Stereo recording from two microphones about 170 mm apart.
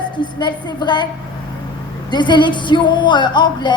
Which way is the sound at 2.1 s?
25° left (ahead or behind).